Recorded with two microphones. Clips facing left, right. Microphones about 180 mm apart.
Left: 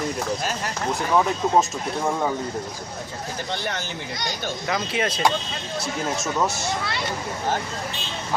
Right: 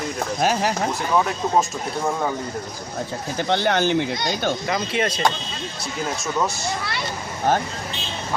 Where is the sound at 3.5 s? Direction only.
75° right (ahead or behind).